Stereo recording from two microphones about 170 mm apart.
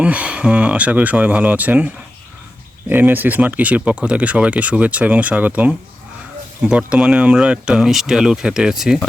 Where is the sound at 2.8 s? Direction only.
10° right (ahead or behind).